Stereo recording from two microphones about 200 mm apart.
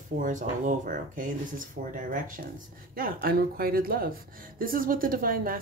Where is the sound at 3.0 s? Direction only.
45° right (ahead or behind).